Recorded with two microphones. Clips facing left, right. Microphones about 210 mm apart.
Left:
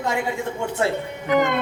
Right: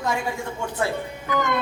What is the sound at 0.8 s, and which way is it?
Speech, 25° left (ahead or behind).